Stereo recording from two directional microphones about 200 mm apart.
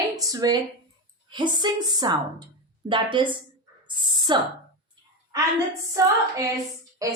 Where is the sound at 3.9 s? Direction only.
20° right (ahead or behind).